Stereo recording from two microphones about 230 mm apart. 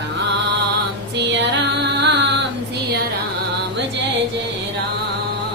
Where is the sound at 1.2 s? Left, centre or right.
Right.